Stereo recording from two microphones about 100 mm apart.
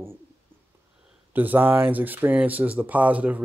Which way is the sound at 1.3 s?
15° right (ahead or behind).